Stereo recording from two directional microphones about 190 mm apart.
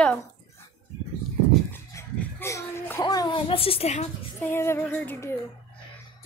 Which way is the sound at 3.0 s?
20° left (ahead or behind).